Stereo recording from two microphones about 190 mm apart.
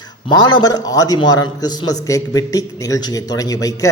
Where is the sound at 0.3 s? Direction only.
20° left (ahead or behind).